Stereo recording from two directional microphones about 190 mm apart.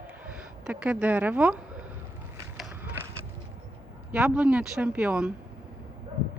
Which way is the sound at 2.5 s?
5° right (ahead or behind).